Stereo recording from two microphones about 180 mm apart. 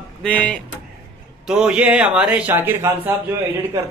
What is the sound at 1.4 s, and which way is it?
A man's voice, 5° right (ahead or behind).